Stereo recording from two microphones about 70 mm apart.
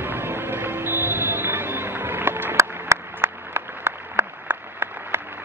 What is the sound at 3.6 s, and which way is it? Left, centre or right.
Applause, right.